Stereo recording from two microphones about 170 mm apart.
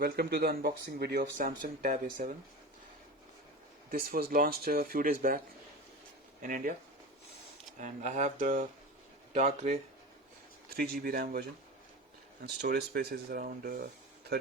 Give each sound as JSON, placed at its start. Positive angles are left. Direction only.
{"t": 0.0, "sound": "speech", "side_deg": -65}
{"t": 3.9, "sound": "speech", "side_deg": -60}
{"t": 6.4, "sound": "speech", "side_deg": -55}
{"t": 7.8, "sound": "speech", "side_deg": -45}
{"t": 10.8, "sound": "speech", "side_deg": -60}